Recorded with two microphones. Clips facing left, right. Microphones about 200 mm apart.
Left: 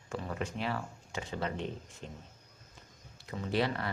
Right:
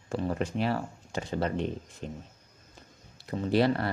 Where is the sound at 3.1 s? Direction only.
35° right (ahead or behind).